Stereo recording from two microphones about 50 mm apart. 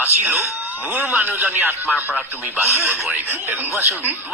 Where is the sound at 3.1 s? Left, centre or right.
Right.